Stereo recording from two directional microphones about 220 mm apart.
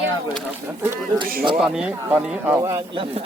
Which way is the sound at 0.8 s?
10° right (ahead or behind).